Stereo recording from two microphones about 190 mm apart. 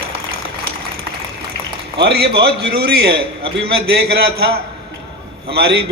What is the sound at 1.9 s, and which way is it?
A man's voice, 55° right (ahead or behind).